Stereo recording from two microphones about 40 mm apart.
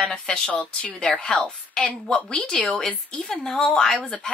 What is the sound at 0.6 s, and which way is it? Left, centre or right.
A woman's voice, left.